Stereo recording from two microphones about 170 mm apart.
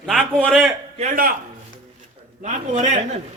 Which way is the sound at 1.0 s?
55° right (ahead or behind).